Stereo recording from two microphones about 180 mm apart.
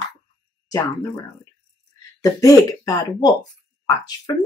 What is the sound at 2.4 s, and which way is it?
Speech, 20° left (ahead or behind).